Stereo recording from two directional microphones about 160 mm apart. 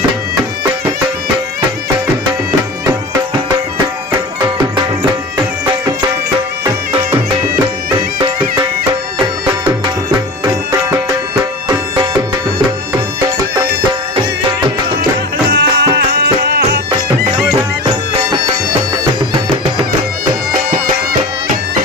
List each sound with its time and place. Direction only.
9.1 s music: 30° right (ahead or behind)
15.4 s music: 90° right
20.7 s music: 65° right (ahead or behind)